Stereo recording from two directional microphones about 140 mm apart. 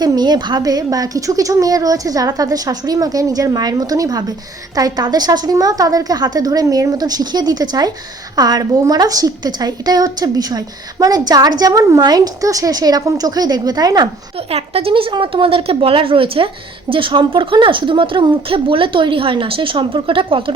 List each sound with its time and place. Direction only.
0.0 s a woman's voice: 30° right (ahead or behind)
14.3 s speech: 45° right (ahead or behind)